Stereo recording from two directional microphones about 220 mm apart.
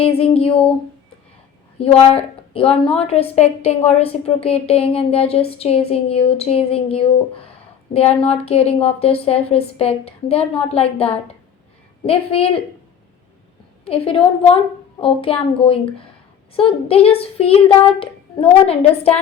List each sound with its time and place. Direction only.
0.0 s a woman's voice: 25° left (ahead or behind)
1.8 s a woman's voice: 25° left (ahead or behind)
13.8 s a woman's voice: 25° left (ahead or behind)